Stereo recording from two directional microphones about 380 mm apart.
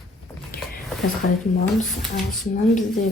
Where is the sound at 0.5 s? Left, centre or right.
Left.